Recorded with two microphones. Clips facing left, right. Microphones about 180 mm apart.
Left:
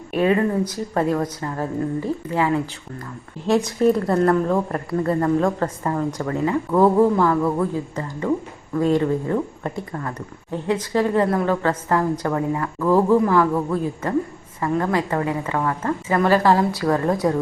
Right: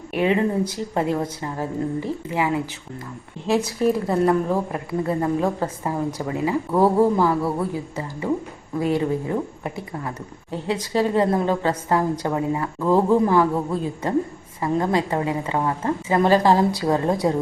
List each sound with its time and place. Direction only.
0.1 s a woman's voice: 20° right (ahead or behind)
3.7 s a woman's voice: 5° right (ahead or behind)